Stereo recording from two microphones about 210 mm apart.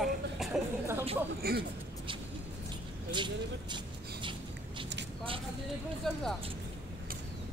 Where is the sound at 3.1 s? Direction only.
20° right (ahead or behind).